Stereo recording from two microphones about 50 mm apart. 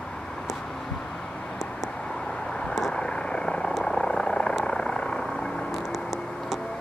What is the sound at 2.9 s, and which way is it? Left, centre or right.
Vehicle, centre.